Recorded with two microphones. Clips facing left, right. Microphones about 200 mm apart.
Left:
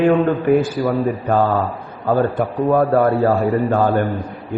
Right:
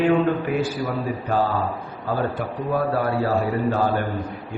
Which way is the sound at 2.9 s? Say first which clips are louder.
Left 7 dB; 55° left (ahead or behind).